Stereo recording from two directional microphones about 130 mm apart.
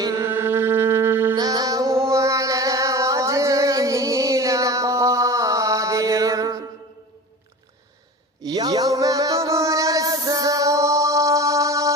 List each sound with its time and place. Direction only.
0.0 s mantra: 25° right (ahead or behind)
1.4 s music: 30° right (ahead or behind)
8.4 s music: 30° right (ahead or behind)